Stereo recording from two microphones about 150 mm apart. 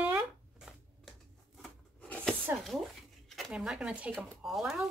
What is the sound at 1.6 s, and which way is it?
Rub, 10° left (ahead or behind).